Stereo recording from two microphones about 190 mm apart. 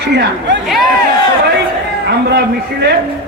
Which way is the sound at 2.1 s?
60° right (ahead or behind).